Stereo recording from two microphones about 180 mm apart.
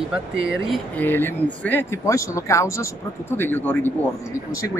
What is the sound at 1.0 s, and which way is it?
Speech, 10° left (ahead or behind).